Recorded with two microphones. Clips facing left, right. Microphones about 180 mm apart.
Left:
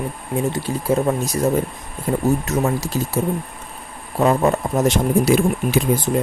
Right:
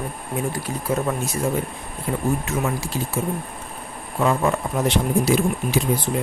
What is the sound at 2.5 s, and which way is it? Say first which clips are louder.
Speech: left 4 dB; 40° left (ahead or behind).